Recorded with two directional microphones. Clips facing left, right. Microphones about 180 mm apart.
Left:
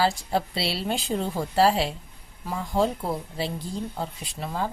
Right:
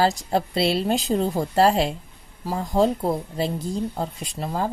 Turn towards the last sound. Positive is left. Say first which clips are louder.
# right 4 dB
turn(degrees=-40)  # may be behind; listen again after turning